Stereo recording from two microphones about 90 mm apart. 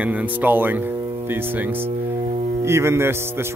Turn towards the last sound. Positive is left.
turn(degrees=-25)  # may be behind; listen again after turning